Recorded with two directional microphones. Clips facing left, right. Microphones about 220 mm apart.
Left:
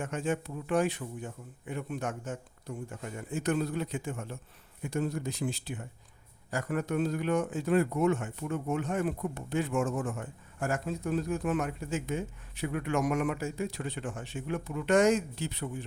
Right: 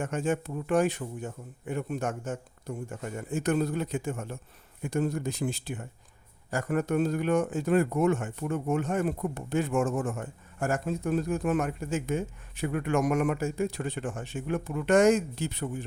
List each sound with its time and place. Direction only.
0.0 s speech: 45° right (ahead or behind)